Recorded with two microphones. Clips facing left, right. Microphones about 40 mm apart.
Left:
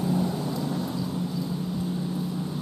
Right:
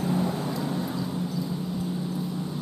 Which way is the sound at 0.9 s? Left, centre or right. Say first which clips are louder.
Even; centre.